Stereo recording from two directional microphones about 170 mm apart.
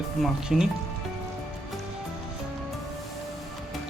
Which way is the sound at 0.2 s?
5° right (ahead or behind).